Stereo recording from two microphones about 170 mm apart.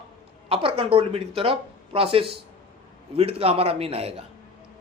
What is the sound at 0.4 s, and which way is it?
Speech, 35° right (ahead or behind).